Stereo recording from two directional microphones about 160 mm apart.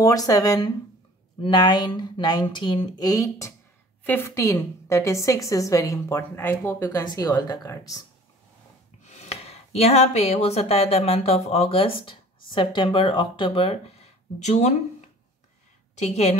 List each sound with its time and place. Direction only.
0.0 s a woman's voice: 20° left (ahead or behind)
9.0 s speech: 45° left (ahead or behind)
16.0 s a woman's voice: 45° left (ahead or behind)